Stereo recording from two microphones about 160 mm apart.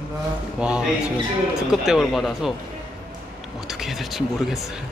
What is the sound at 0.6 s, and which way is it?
A man's voice, 5° right (ahead or behind).